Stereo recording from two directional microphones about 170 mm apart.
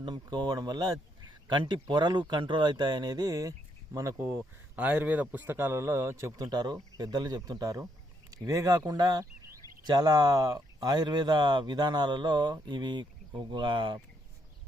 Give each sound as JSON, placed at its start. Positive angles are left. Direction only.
{"t": 0.0, "sound": "speech", "side_deg": -25}